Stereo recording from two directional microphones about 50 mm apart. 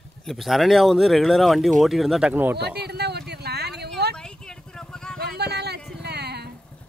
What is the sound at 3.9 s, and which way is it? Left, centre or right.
Vehicle, centre.